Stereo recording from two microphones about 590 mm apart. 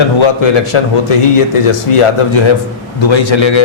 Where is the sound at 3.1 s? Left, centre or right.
Left.